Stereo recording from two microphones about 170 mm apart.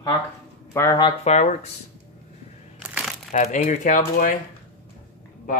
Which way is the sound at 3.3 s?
45° left (ahead or behind).